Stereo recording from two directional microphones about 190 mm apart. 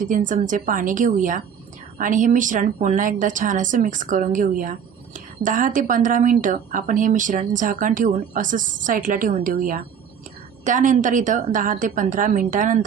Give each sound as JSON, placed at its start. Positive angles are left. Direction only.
{"t": 0.0, "sound": "a woman's voice", "side_deg": -45}